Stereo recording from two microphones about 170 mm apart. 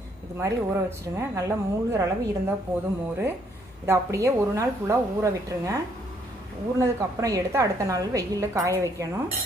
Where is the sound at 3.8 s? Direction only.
15° right (ahead or behind).